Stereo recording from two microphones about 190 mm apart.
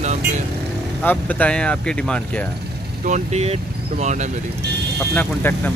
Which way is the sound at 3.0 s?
35° right (ahead or behind).